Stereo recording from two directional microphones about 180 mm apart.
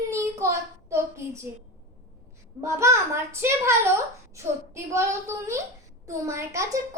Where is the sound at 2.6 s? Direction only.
15° right (ahead or behind).